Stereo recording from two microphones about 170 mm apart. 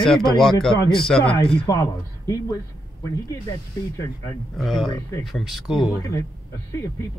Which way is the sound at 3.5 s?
15° left (ahead or behind).